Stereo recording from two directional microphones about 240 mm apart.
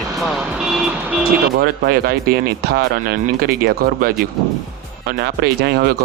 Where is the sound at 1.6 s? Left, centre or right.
Right.